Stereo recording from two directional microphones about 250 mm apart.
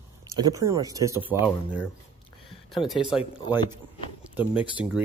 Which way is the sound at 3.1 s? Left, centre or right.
Centre.